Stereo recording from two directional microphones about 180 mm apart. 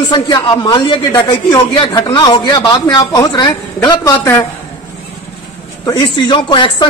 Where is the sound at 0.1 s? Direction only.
25° left (ahead or behind).